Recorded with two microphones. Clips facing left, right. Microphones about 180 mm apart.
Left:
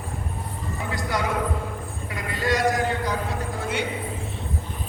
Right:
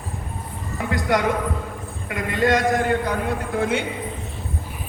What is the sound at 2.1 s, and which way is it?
A man's voice, 55° right (ahead or behind).